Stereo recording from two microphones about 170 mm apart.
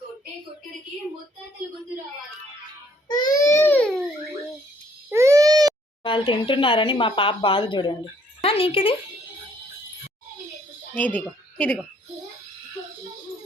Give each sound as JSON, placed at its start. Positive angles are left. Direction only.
{"t": 3.1, "sound": "speech", "side_deg": 25}
{"t": 5.1, "sound": "baby cry", "side_deg": -15}
{"t": 6.0, "sound": "speech", "side_deg": 30}
{"t": 10.9, "sound": "a woman's voice", "side_deg": 10}